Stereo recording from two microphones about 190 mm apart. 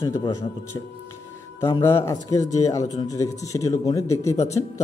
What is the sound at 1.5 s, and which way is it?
A man's voice, 15° left (ahead or behind).